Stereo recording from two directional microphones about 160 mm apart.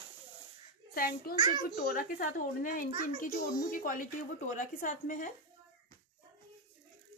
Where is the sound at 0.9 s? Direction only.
65° left (ahead or behind).